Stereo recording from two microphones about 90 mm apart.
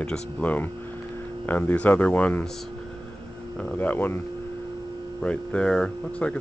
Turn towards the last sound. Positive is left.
turn(degrees=10)  # may be behind; listen again after turning